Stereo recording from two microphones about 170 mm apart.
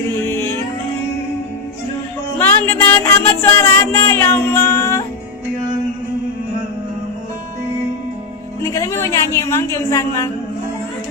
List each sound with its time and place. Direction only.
0.3 s music: 15° left (ahead or behind)
2.4 s music: 10° left (ahead or behind)
8.6 s a woman's voice: 15° left (ahead or behind)